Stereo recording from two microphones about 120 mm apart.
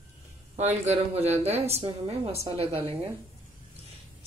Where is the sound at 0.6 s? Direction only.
65° right (ahead or behind).